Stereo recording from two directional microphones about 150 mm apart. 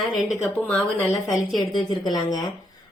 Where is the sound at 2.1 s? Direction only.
25° left (ahead or behind).